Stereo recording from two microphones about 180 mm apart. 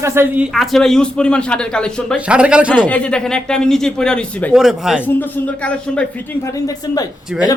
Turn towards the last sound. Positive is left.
turn(degrees=20)  # may be behind; listen again after turning